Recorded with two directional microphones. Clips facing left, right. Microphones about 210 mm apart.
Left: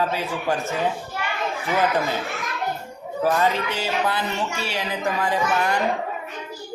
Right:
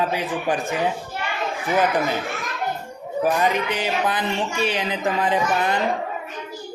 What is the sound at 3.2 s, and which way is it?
Speech, 15° right (ahead or behind).